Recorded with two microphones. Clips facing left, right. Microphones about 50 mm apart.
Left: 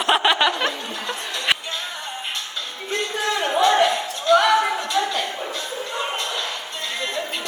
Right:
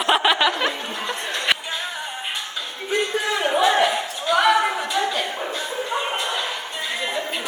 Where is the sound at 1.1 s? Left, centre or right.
Centre.